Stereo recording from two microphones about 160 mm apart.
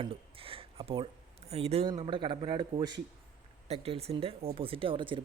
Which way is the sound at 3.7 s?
40° right (ahead or behind).